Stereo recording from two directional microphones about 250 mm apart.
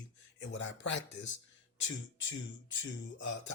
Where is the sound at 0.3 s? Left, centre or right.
Left.